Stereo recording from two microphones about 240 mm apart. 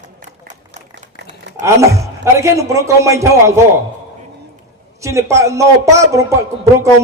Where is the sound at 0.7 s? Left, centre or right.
Right.